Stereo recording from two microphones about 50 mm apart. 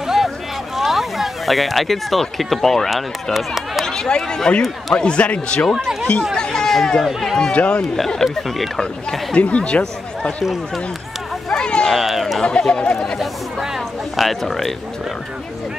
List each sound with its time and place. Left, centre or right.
0.0 s boat: centre
0.7 s speech: centre
3.3 s speech: centre
3.8 s speech: centre
4.9 s speech: left
6.3 s speech: centre
7.1 s speech: centre
7.5 s speech: left
7.9 s speech: centre
9.3 s speech: left
11.5 s a sound: centre
11.9 s a sound: centre
12.4 s speech: centre
13.6 s a sound: centre